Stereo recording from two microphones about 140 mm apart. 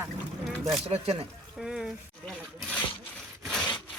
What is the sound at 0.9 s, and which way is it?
Speech, 45° right (ahead or behind).